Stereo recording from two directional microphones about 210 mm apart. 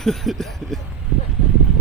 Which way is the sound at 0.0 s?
Centre (ahead or behind).